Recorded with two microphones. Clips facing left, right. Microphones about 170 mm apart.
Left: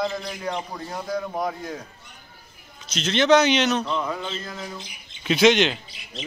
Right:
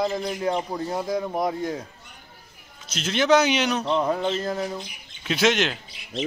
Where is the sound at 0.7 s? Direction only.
25° right (ahead or behind).